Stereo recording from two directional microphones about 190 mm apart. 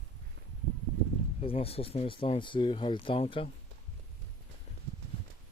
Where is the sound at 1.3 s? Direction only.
30° left (ahead or behind).